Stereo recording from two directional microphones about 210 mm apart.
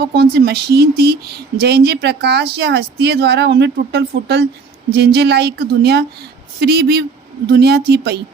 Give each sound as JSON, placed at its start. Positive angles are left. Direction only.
{"t": 0.0, "sound": "speech", "side_deg": -50}